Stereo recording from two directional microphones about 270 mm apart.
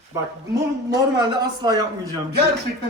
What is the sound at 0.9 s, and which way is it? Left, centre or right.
A man's voice, centre.